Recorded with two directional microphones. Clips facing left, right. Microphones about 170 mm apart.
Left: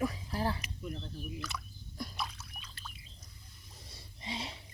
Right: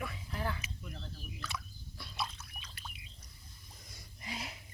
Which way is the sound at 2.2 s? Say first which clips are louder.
Even; 5° left (ahead or behind).